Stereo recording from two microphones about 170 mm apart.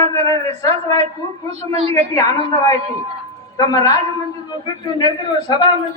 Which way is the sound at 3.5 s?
20° left (ahead or behind).